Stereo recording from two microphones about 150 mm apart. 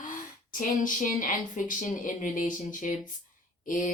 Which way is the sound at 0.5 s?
65° left (ahead or behind).